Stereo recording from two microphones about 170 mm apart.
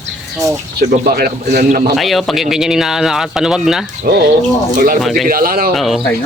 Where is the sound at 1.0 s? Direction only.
65° right (ahead or behind).